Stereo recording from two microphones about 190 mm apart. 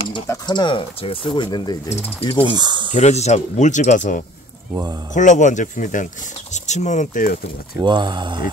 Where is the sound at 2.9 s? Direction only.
35° left (ahead or behind).